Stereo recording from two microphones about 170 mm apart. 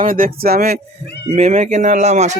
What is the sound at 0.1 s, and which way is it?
Speech, 60° right (ahead or behind).